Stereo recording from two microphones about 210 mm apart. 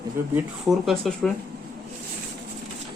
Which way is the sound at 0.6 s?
Centre (ahead or behind).